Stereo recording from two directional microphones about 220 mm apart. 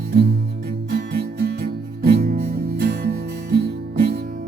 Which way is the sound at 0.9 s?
45° right (ahead or behind).